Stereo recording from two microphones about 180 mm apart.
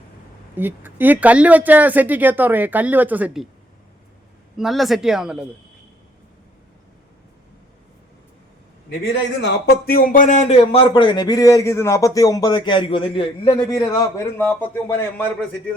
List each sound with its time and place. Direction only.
0.5 s speech: 10° right (ahead or behind)
4.5 s speech: centre (ahead or behind)
9.4 s speech: 60° left (ahead or behind); by 10.6 s 45° left (ahead or behind)
10.6 s speech: 30° left (ahead or behind); by 15.7 s 10° left (ahead or behind)